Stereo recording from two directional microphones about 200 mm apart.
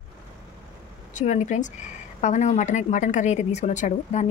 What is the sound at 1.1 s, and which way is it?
A woman's voice, 35° left (ahead or behind).